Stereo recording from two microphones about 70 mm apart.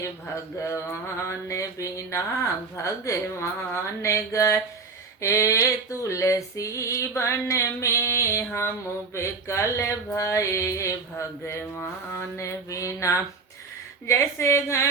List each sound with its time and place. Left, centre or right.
0.3 s female singing: left
14.1 s speech: left